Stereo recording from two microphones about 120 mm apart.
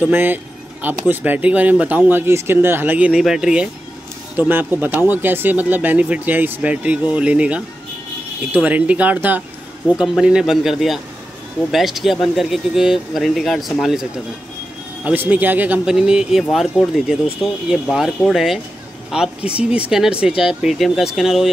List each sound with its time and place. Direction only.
0.0 s speech: 15° right (ahead or behind)
15.0 s speech: 15° right (ahead or behind)